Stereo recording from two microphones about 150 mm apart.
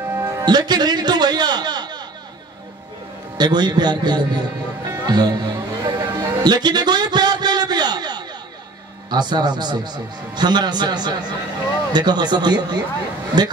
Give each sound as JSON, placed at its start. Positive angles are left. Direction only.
{"t": 0.0, "sound": "music", "side_deg": -20}
{"t": 3.3, "sound": "speech", "side_deg": -30}
{"t": 4.9, "sound": "music", "side_deg": -25}
{"t": 9.1, "sound": "speech", "side_deg": -30}